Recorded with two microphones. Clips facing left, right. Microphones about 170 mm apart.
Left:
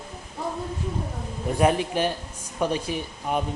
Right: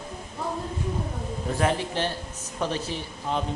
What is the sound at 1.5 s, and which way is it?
Speech, 15° left (ahead or behind).